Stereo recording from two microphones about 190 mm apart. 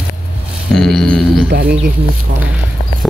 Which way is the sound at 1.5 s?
60° right (ahead or behind).